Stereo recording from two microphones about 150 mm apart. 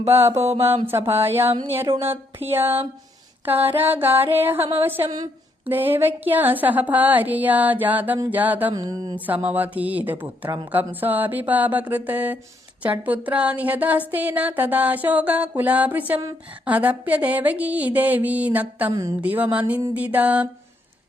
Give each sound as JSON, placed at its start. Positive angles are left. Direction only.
{"t": 0.1, "sound": "music", "side_deg": -15}
{"t": 1.9, "sound": "speech", "side_deg": -35}
{"t": 2.5, "sound": "music", "side_deg": -15}
{"t": 8.7, "sound": "speech", "side_deg": -25}
{"t": 9.1, "sound": "music", "side_deg": -10}